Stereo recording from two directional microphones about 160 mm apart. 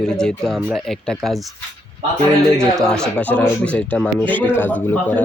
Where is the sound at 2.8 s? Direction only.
5° left (ahead or behind).